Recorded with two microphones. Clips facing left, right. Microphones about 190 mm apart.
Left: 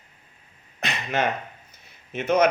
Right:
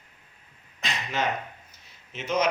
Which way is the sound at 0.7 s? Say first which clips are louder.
Left 4 dB; 60° left (ahead or behind).